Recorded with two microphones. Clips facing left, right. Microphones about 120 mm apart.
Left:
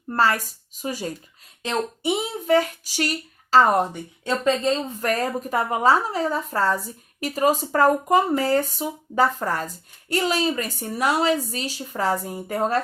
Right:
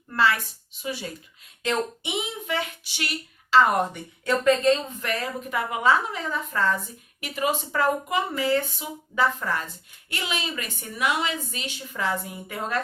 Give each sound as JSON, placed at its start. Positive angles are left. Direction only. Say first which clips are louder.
{"t": 0.1, "sound": "a woman's voice", "louder": "left 2 dB", "side_deg": 40}